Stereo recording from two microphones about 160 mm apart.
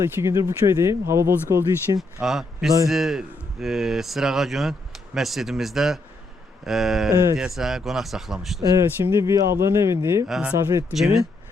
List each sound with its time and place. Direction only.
0.2 s speech: 15° right (ahead or behind)
2.2 s speech: centre (ahead or behind)
7.1 s speech: 20° right (ahead or behind)
7.3 s speech: 5° right (ahead or behind)
9.0 s speech: 15° right (ahead or behind)
10.2 s speech: 5° right (ahead or behind)